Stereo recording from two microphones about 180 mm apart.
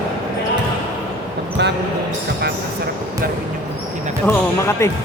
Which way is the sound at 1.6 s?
70° right (ahead or behind).